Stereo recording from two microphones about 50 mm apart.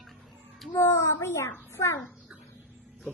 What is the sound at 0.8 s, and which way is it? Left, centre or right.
A child's voice, left.